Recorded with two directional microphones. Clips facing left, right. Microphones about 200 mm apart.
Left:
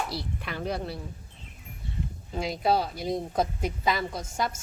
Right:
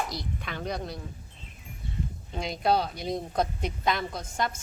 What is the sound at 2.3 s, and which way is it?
Speech, 5° left (ahead or behind).